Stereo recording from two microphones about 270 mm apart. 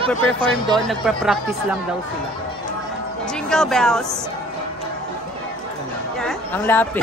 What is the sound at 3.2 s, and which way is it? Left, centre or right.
Speech, centre.